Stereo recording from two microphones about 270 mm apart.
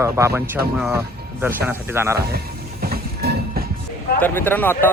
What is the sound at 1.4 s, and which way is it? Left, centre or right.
Speech, centre.